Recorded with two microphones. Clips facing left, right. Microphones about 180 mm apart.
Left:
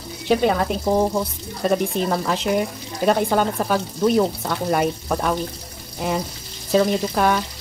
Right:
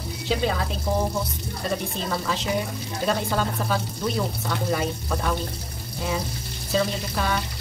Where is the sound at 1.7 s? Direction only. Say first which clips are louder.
Left 8 dB; 55° left (ahead or behind).